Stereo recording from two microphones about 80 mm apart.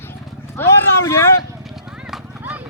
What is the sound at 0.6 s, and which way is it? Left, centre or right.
Speech, left.